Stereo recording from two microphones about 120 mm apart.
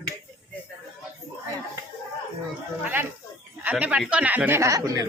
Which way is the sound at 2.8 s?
15° right (ahead or behind).